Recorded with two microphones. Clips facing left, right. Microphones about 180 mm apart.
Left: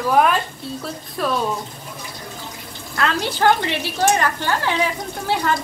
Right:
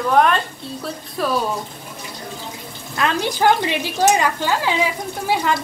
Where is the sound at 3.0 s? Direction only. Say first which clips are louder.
Right 1 dB; 15° right (ahead or behind).